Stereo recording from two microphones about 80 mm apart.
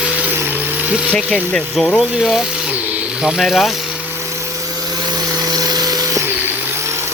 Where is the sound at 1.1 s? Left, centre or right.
Centre.